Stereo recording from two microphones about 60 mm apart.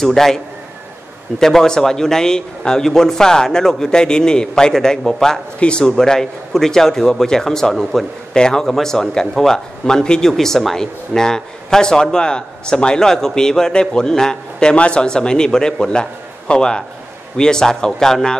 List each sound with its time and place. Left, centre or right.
0.0 s a man's voice: centre
1.4 s speech: centre
8.3 s speech: centre